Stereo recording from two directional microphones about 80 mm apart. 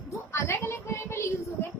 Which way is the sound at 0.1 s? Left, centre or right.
Left.